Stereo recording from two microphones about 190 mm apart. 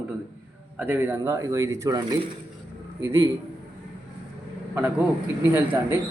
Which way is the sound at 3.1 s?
15° right (ahead or behind).